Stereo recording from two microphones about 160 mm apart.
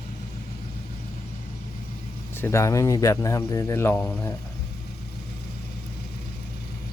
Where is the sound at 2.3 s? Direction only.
15° left (ahead or behind).